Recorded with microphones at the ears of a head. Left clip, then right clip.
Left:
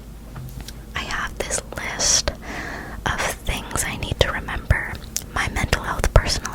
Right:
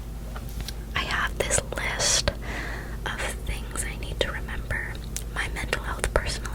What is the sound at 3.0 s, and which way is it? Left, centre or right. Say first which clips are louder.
Whispering: left 8 dB; left.